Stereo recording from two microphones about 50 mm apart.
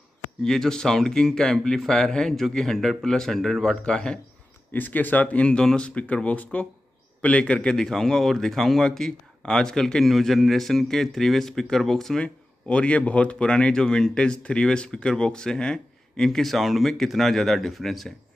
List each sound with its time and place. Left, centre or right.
0.4 s speech: centre
4.7 s speech: left
5.6 s speech: centre
5.9 s speech: left
7.7 s speech: centre
12.2 s speech: left; by 18.1 s centre